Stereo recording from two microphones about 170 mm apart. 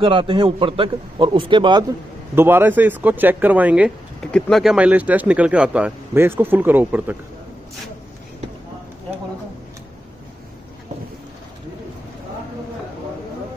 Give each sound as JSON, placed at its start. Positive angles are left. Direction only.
{"t": 0.0, "sound": "a man's voice", "side_deg": -30}
{"t": 2.3, "sound": "speech", "side_deg": -15}
{"t": 4.2, "sound": "speech", "side_deg": 5}